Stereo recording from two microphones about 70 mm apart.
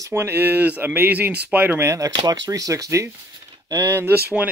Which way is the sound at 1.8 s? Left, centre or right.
Right.